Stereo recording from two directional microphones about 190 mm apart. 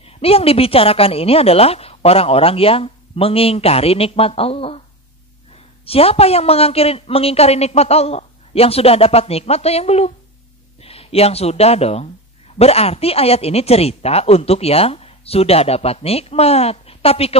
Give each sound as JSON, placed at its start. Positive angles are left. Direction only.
{"t": 0.0, "sound": "speech", "side_deg": 30}